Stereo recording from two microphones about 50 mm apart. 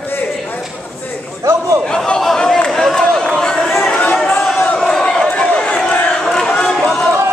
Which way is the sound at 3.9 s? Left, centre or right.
Left.